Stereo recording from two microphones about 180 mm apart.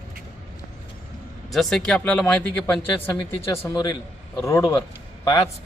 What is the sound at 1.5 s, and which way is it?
A man's voice, 5° left (ahead or behind).